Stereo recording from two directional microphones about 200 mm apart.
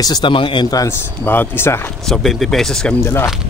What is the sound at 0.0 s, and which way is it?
Speech, 20° left (ahead or behind).